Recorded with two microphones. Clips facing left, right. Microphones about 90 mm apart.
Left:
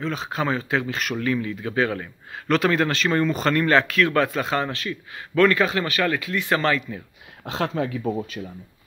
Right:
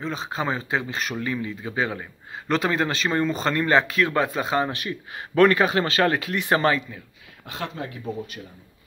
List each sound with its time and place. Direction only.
0.0 s speech: centre (ahead or behind)
4.6 s speech: 15° right (ahead or behind)
7.4 s speech: 90° left